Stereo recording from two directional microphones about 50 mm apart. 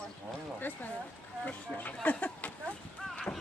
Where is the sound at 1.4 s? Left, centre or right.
Left.